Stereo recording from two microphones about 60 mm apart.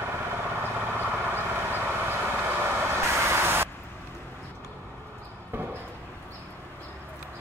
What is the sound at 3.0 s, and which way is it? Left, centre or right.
Vehicle, right.